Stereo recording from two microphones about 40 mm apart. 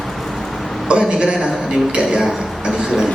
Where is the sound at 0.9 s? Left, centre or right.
Right.